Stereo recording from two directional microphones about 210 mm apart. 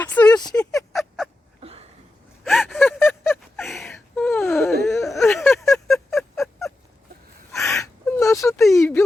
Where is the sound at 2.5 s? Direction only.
Centre (ahead or behind).